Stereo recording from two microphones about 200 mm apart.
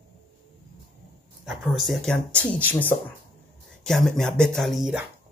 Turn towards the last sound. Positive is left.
turn(degrees=0)  # may be behind; listen again after turning